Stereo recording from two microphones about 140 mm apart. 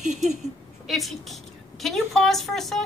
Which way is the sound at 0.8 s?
Centre (ahead or behind).